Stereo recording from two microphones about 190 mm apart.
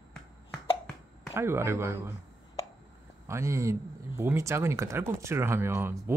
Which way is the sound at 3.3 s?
15° right (ahead or behind).